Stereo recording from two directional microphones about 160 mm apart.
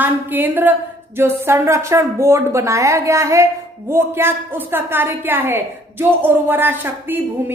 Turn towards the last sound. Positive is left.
turn(degrees=-10)  # may be behind; listen again after turning